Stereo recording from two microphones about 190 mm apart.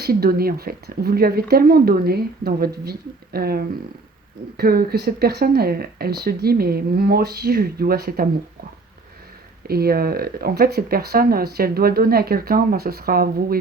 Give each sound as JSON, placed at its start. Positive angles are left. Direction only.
{"t": 0.0, "sound": "speech", "side_deg": -55}
{"t": 9.6, "sound": "speech", "side_deg": -55}